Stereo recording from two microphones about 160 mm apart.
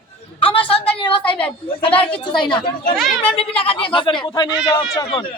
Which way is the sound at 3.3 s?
35° left (ahead or behind).